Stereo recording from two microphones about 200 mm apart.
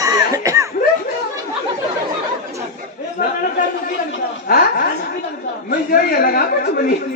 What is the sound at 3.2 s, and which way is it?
Chatter, 45° left (ahead or behind).